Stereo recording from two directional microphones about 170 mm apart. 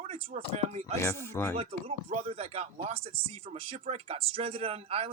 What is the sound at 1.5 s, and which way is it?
Speech, 40° right (ahead or behind).